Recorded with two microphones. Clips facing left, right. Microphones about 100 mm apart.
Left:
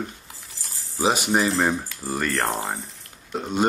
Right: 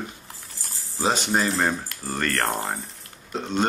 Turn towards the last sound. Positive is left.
turn(degrees=10)  # may be behind; listen again after turning